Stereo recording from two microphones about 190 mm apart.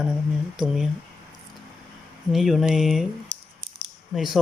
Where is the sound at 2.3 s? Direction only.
Centre (ahead or behind).